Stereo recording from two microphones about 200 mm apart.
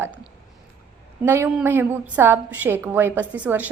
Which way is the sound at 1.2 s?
10° right (ahead or behind).